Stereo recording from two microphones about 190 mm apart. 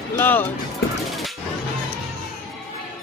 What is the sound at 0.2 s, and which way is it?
Speech, 10° left (ahead or behind).